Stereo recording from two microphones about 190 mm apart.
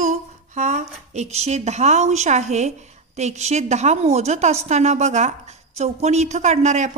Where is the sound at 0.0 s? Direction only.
40° right (ahead or behind).